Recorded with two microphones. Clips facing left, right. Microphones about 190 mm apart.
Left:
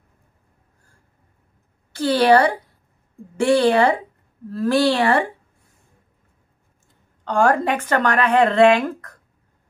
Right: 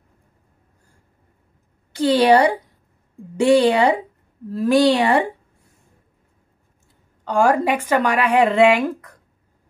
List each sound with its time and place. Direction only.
1.9 s speech: 20° right (ahead or behind)
7.2 s speech: 10° right (ahead or behind)